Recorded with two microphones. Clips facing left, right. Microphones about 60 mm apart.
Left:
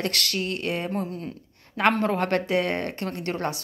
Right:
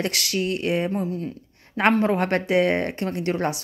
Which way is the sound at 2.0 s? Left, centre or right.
Right.